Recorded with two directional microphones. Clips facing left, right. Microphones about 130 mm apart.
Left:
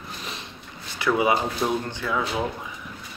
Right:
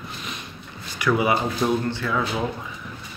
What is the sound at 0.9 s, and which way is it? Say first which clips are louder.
Speech: even; 25° left (ahead or behind).